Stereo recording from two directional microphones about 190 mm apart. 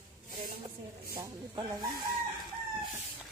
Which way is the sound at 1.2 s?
20° right (ahead or behind).